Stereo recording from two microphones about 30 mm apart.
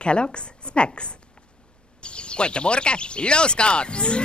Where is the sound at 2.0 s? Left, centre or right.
Left.